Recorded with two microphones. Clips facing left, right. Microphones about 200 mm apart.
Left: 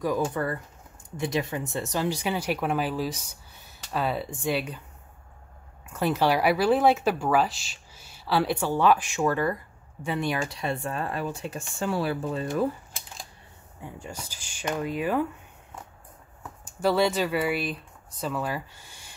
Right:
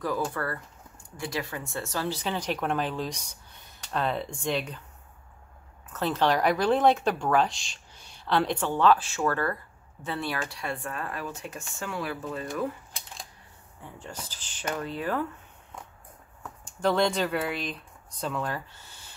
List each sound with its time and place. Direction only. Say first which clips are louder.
0.0 s speech: left 3 dB; 15° left (ahead or behind)
5.9 s speech: left 2 dB; 10° left (ahead or behind); by 12.6 s 30° left (ahead or behind)
13.8 s speech: left 2 dB; 10° left (ahead or behind)
16.6 s speech: left 2 dB; 5° left (ahead or behind)